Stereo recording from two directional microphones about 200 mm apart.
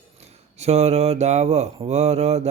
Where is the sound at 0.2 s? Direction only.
30° right (ahead or behind).